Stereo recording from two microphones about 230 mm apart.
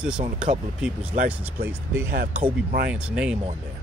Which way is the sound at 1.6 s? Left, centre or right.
Centre.